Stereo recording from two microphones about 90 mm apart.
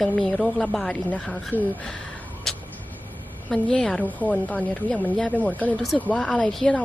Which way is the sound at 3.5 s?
5° left (ahead or behind).